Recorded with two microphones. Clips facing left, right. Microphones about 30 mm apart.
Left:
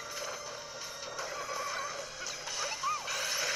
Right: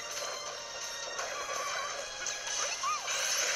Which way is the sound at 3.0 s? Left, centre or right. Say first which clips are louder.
Right 1 dB; left.